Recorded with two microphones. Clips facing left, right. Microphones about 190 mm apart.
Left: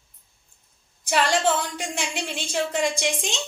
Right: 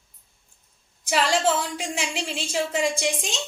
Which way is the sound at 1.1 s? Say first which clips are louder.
Even; centre (ahead or behind).